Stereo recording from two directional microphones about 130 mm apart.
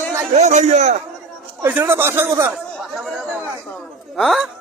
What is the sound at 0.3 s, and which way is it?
Speech, 65° right (ahead or behind).